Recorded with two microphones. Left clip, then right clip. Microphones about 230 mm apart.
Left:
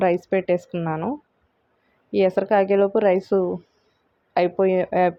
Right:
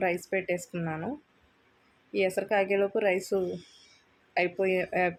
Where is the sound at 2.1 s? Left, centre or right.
Left.